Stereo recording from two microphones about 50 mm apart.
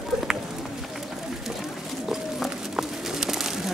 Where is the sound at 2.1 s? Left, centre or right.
Centre.